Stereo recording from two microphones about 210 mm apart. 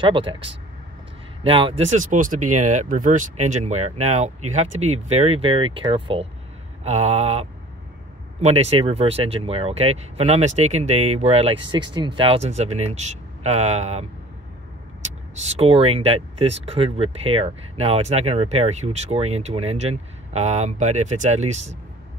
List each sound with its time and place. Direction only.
0.0 s speech: 25° right (ahead or behind)
15.5 s speech: 25° right (ahead or behind)